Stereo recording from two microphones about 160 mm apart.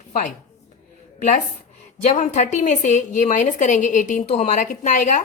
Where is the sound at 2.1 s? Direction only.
50° left (ahead or behind).